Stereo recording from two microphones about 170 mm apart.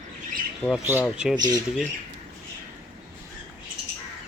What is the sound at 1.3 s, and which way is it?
Speech, 25° right (ahead or behind).